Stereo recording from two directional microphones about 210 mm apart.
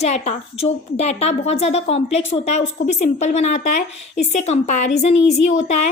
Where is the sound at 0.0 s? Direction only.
30° left (ahead or behind).